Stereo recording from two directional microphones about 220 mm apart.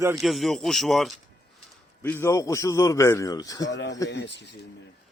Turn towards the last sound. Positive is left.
turn(degrees=50)  # may be behind; listen again after turning